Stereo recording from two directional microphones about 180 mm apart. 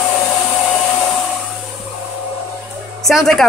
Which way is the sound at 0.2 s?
15° left (ahead or behind).